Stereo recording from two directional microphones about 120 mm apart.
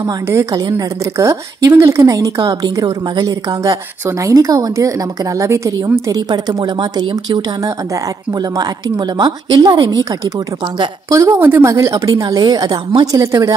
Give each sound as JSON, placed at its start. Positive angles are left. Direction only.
{"t": 0.0, "sound": "a woman's voice", "side_deg": -25}
{"t": 11.1, "sound": "a woman's voice", "side_deg": -25}